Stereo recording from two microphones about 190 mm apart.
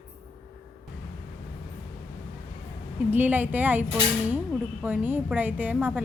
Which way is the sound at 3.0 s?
10° right (ahead or behind).